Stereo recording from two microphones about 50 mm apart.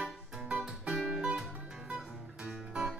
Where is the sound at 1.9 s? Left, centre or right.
Centre.